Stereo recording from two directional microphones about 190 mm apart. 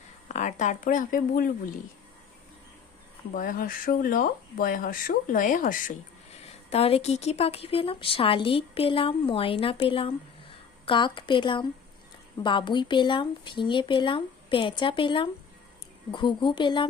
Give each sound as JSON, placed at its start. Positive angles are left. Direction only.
{"t": 0.3, "sound": "speech", "side_deg": 40}
{"t": 3.3, "sound": "speech", "side_deg": 45}
{"t": 6.7, "sound": "a woman's voice", "side_deg": 30}